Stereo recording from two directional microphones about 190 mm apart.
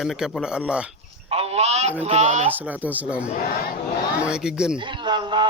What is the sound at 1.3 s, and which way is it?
Honk, 30° right (ahead or behind).